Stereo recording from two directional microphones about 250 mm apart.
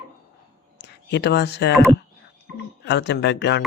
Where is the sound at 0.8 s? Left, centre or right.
Left.